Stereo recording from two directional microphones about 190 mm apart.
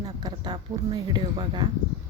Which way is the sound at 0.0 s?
20° right (ahead or behind).